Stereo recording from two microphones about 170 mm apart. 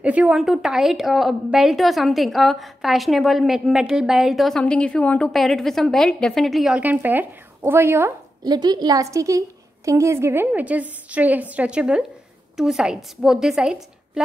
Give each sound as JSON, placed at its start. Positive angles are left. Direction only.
{"t": 0.0, "sound": "a woman's voice", "side_deg": -10}
{"t": 8.5, "sound": "a woman's voice", "side_deg": -25}